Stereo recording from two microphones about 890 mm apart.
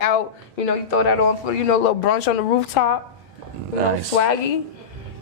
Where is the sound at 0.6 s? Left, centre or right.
Left.